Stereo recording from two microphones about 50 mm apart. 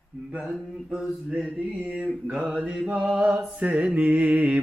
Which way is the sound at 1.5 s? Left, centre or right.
Right.